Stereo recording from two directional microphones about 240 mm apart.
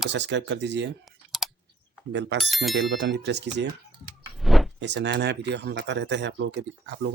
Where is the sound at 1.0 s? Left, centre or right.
Centre.